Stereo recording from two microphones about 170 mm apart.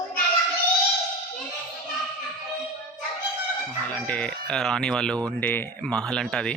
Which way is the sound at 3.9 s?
10° left (ahead or behind).